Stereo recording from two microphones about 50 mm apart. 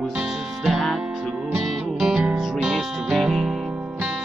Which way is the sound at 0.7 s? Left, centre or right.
Centre.